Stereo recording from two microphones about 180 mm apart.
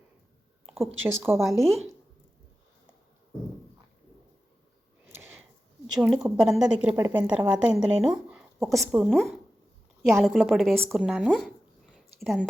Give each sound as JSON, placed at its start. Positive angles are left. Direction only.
{"t": 1.0, "sound": "a woman's voice", "side_deg": -15}
{"t": 1.5, "sound": "a woman's voice", "side_deg": 0}
{"t": 5.9, "sound": "a woman's voice", "side_deg": -5}
{"t": 6.9, "sound": "a woman's voice", "side_deg": -20}
{"t": 7.2, "sound": "a woman's voice", "side_deg": -10}
{"t": 11.3, "sound": "a sound", "side_deg": 0}